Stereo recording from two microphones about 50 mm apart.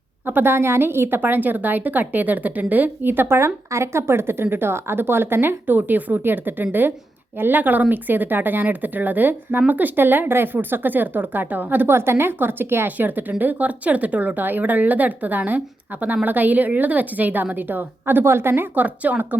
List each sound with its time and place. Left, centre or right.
0.3 s a woman's voice: right
11.9 s a woman's voice: right